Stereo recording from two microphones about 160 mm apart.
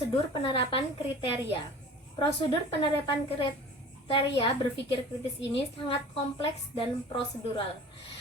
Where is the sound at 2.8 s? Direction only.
30° left (ahead or behind).